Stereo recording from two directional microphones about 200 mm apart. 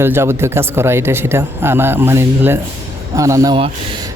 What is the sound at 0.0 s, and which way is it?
Speech, 10° right (ahead or behind).